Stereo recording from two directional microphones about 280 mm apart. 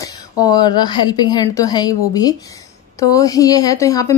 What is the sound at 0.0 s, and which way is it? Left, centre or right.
Speech, centre.